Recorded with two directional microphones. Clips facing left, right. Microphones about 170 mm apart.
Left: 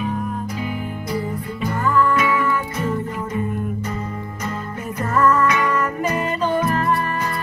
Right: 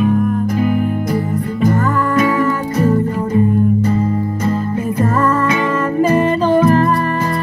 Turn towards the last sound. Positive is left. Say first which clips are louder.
# right 8 dB
turn(degrees=-30)  # may be behind; listen again after turning